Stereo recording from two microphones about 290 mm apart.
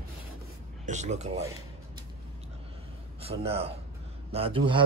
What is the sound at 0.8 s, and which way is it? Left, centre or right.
Speech, right.